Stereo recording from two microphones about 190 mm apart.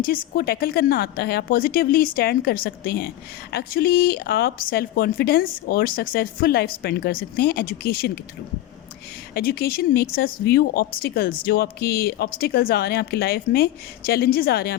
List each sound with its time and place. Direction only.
0.0 s speech: 50° left (ahead or behind)
9.3 s speech: 55° left (ahead or behind)